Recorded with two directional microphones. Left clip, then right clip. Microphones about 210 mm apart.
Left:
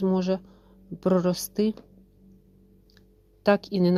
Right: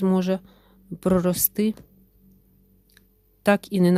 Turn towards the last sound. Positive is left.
turn(degrees=-35)  # may be behind; listen again after turning